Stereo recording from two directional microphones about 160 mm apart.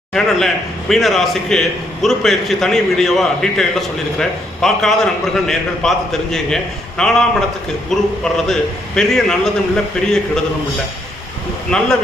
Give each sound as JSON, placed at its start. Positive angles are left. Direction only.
{"t": 0.1, "sound": "a man's voice", "side_deg": 0}
{"t": 11.7, "sound": "a man's voice", "side_deg": 5}